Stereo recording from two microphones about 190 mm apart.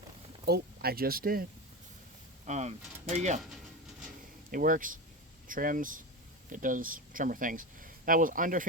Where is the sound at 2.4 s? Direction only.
35° right (ahead or behind).